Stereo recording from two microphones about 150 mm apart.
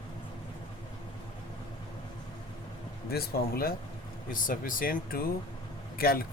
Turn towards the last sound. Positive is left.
turn(degrees=90)